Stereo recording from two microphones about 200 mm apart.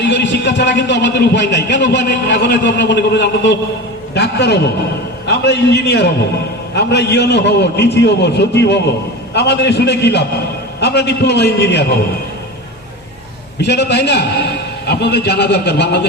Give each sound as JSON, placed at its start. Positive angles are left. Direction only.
{"t": 0.0, "sound": "a man's voice", "side_deg": 60}
{"t": 13.6, "sound": "a man's voice", "side_deg": 60}